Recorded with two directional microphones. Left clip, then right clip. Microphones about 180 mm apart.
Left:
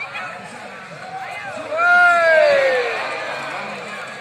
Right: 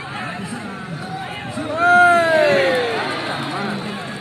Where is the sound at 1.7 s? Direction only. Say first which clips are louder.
Right 1 dB; 25° right (ahead or behind).